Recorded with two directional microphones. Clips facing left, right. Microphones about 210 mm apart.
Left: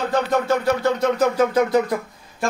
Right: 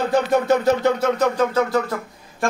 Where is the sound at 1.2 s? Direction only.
10° left (ahead or behind).